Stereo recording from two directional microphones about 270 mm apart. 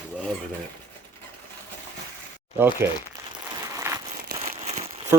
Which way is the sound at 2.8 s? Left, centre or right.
Centre.